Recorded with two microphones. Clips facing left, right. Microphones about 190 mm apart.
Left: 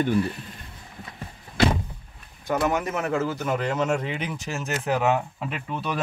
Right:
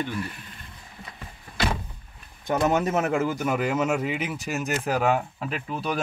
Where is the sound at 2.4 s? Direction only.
20° right (ahead or behind).